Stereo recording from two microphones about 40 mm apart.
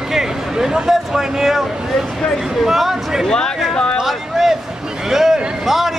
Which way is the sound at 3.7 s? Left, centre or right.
Left.